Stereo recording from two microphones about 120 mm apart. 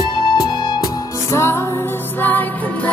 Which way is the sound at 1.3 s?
20° left (ahead or behind).